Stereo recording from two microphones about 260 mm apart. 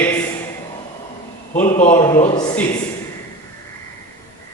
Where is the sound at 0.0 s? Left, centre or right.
Centre.